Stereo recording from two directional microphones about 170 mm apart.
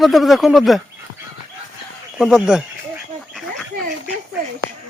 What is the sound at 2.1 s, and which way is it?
Speech, 5° right (ahead or behind).